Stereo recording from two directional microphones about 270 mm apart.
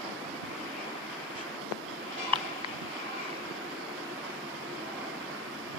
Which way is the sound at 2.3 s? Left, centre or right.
Centre.